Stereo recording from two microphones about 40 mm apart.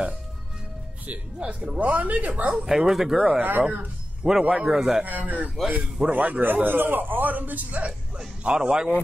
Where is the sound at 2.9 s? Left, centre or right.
Centre.